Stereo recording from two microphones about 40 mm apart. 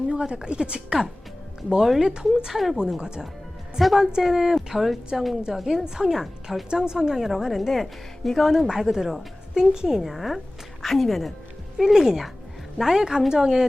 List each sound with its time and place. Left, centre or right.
0.1 s a woman's voice: right
1.8 s a woman's voice: centre
2.5 s speech: centre
3.8 s a woman's voice: centre
6.7 s a woman's voice: centre
7.2 s a woman's voice: centre
8.6 s a woman's voice: centre
11.8 s a woman's voice: centre